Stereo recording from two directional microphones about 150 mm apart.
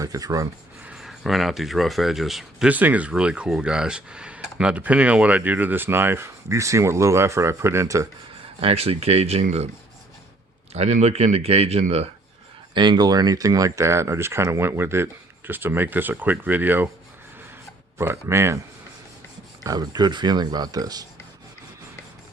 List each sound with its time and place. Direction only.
0.0 s speech: 20° right (ahead or behind)
0.9 s speech: centre (ahead or behind); by 8.0 s 20° right (ahead or behind)
8.6 s speech: 40° right (ahead or behind)
10.8 s speech: 45° right (ahead or behind)
12.7 s speech: 30° right (ahead or behind); by 16.9 s 10° right (ahead or behind)
17.9 s speech: 15° right (ahead or behind)
19.6 s speech: 25° right (ahead or behind)